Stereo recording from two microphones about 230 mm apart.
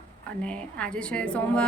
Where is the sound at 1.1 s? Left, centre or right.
Centre.